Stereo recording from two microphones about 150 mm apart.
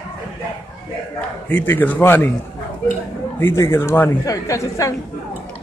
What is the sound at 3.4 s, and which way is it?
Speech, 15° left (ahead or behind).